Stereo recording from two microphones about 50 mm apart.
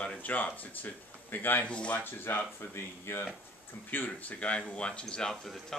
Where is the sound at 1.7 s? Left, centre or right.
Left.